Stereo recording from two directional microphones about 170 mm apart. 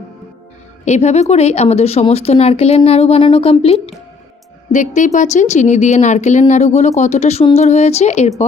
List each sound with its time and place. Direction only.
0.9 s a woman's voice: 40° left (ahead or behind)